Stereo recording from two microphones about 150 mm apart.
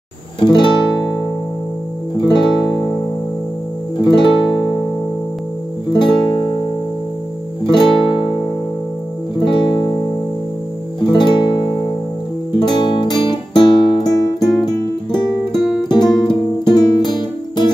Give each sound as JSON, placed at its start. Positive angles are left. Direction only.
{"t": 0.4, "sound": "music", "side_deg": 30}
{"t": 2.2, "sound": "music", "side_deg": 30}
{"t": 4.0, "sound": "music", "side_deg": 30}
{"t": 5.9, "sound": "music", "side_deg": 30}
{"t": 7.7, "sound": "music", "side_deg": 30}
{"t": 11.1, "sound": "music", "side_deg": 30}
{"t": 12.7, "sound": "music", "side_deg": 30}
{"t": 15.8, "sound": "music", "side_deg": 30}